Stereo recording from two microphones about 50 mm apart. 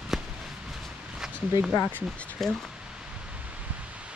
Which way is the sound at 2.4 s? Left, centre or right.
Centre.